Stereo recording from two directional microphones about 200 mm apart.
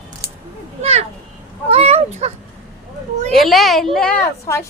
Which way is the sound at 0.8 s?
30° right (ahead or behind).